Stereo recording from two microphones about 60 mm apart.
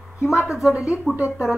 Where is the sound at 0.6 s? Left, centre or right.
Centre.